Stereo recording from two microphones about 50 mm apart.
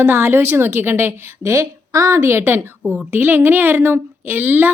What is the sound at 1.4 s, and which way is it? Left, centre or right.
A woman's voice, right.